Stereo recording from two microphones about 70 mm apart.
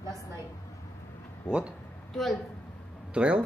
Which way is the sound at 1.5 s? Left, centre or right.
Centre.